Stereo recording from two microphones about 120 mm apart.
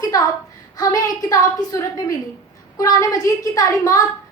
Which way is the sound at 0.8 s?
30° left (ahead or behind).